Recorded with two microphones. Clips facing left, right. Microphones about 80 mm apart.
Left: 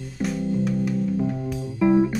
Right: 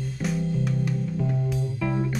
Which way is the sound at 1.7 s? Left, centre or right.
Centre.